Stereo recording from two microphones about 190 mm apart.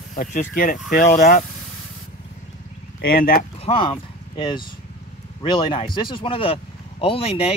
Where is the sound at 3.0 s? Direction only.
50° left (ahead or behind).